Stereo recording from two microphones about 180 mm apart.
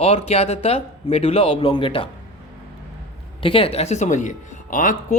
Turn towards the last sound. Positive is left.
turn(degrees=45)  # may be behind; listen again after turning